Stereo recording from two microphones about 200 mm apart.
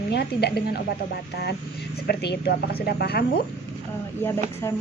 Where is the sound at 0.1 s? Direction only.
55° left (ahead or behind).